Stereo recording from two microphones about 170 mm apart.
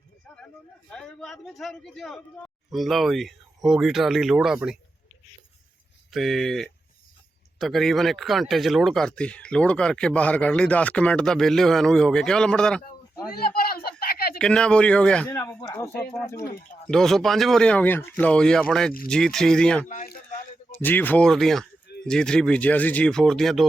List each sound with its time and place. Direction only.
0.3 s a sound: 5° left (ahead or behind)
0.9 s speech: 5° left (ahead or behind)
6.1 s speech: centre (ahead or behind)
13.3 s a sound: 65° left (ahead or behind)
14.3 s speech: 5° left (ahead or behind)
19.9 s a man's voice: 50° left (ahead or behind)
20.7 s speech: 10° left (ahead or behind)